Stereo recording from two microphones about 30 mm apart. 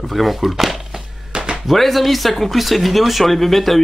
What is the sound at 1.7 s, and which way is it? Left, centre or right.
Speech, centre.